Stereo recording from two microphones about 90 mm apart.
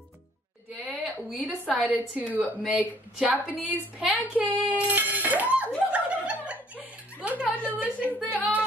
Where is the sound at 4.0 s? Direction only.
15° right (ahead or behind).